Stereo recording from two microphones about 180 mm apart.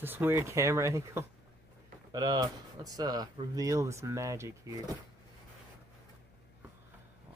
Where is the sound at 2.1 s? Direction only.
20° right (ahead or behind).